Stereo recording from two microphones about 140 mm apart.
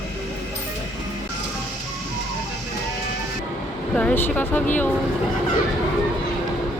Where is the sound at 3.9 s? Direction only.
10° left (ahead or behind).